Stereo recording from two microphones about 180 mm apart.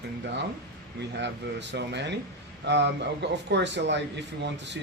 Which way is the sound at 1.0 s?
75° right (ahead or behind).